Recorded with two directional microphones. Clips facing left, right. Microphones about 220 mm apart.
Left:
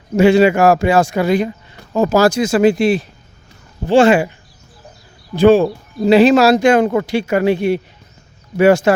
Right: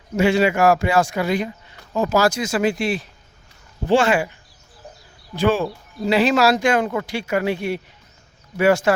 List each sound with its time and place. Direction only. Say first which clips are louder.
0.2 s speech: left 6 dB; 30° left (ahead or behind)
5.3 s speech: left 9 dB; 25° left (ahead or behind)